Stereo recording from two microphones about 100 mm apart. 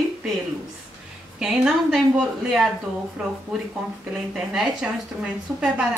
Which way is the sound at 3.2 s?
5° right (ahead or behind).